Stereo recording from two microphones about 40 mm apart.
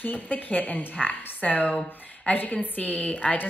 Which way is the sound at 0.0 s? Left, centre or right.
Left.